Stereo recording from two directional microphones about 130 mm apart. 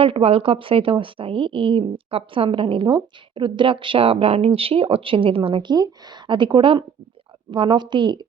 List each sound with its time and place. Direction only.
0.0 s a woman's voice: 45° right (ahead or behind)